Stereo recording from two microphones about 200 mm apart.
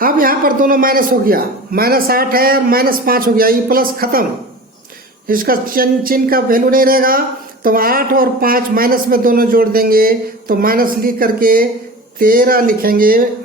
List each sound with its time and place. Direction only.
0.0 s a man's voice: 45° right (ahead or behind)
5.3 s a man's voice: 45° right (ahead or behind)